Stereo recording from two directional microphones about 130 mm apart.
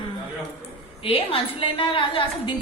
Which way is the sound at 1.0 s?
45° left (ahead or behind).